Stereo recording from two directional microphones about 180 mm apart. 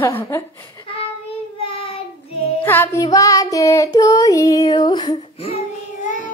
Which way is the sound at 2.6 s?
10° left (ahead or behind).